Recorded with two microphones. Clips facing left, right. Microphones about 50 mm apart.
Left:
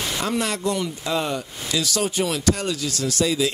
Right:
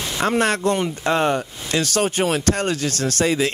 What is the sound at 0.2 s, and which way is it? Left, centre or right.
Speech, right.